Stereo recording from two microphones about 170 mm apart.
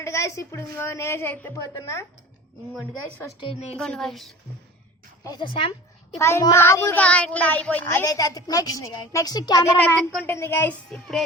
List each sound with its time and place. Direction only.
0.0 s a child's voice: 15° left (ahead or behind)
3.4 s a woman's voice: 35° left (ahead or behind)
3.8 s a woman's voice: centre (ahead or behind)
5.2 s a child's voice: 25° left (ahead or behind)
9.7 s a child's voice: 10° left (ahead or behind)